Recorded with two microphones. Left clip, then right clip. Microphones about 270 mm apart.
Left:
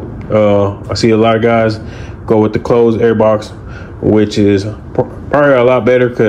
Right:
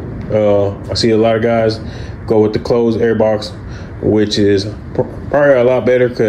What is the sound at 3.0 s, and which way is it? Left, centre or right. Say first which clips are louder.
Speech: left 3 dB; left.